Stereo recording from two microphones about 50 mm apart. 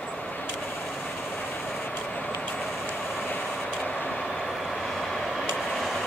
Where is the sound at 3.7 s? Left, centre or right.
Centre.